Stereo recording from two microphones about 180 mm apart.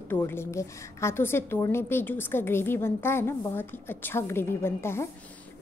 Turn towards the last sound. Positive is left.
turn(degrees=15)  # may be behind; listen again after turning